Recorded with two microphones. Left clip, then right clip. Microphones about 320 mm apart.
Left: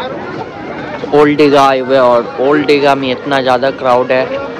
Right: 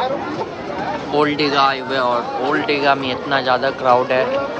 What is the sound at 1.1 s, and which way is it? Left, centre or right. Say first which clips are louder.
Speech: left 10 dB; centre.